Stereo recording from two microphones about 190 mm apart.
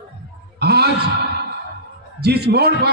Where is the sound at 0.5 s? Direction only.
60° right (ahead or behind).